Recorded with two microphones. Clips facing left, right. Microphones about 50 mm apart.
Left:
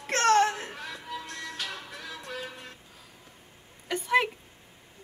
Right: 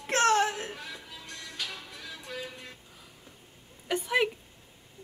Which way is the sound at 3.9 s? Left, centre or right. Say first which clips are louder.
Left 2 dB; centre.